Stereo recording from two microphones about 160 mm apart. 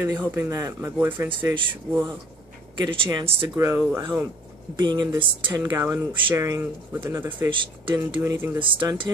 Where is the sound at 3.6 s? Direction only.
15° right (ahead or behind).